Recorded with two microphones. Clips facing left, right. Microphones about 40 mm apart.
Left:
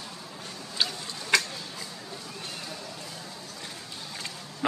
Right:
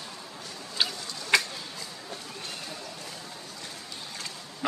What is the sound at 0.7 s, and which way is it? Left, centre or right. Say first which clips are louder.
Tick-tock: even; centre.